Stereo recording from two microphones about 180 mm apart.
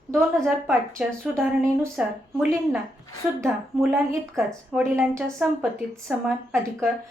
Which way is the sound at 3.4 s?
Centre (ahead or behind).